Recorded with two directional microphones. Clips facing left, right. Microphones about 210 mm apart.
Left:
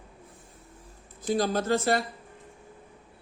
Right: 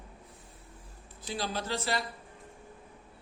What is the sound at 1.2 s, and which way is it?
Speech, 45° left (ahead or behind).